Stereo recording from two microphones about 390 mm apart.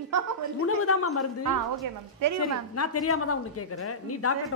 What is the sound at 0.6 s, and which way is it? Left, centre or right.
Speech, left.